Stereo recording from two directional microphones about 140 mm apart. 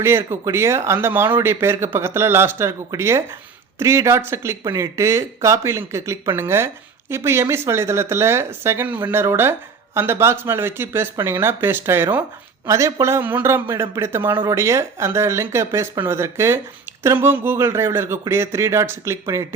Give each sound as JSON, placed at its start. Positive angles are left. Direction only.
{"t": 0.0, "sound": "speech", "side_deg": -15}